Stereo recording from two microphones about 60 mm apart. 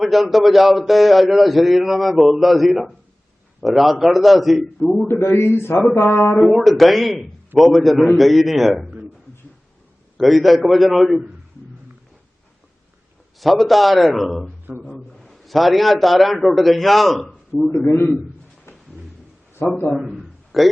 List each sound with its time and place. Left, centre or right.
0.0 s a man's voice: centre
5.0 s a man's voice: left
6.4 s a man's voice: centre
10.2 s a man's voice: centre
13.4 s a man's voice: centre
14.7 s a man's voice: right
15.2 s a man's voice: centre
19.5 s a man's voice: left
20.5 s speech: centre